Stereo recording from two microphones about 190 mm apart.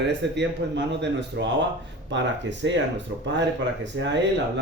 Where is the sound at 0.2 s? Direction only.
65° right (ahead or behind).